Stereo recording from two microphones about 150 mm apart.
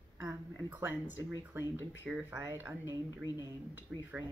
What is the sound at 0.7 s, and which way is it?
Speech, 15° right (ahead or behind).